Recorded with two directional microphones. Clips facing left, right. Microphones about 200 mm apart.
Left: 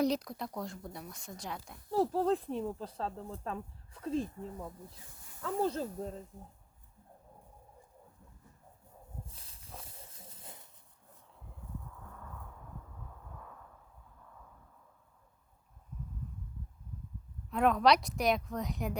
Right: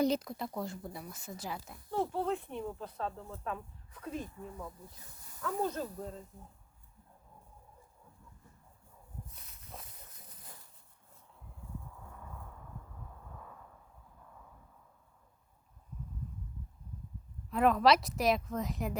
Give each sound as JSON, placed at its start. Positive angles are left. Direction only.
{"t": 0.0, "sound": "speech", "side_deg": 0}
{"t": 1.9, "sound": "speech", "side_deg": 35}
{"t": 9.2, "sound": "walk", "side_deg": 30}
{"t": 17.5, "sound": "speech", "side_deg": 0}